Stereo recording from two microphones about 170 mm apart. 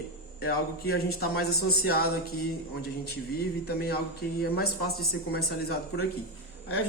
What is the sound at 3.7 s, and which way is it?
Speech, 65° left (ahead or behind).